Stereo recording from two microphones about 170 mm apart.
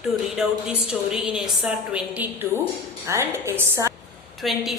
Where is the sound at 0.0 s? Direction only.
5° right (ahead or behind).